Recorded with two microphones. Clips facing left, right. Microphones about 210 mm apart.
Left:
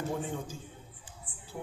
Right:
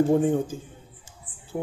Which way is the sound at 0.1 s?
50° right (ahead or behind).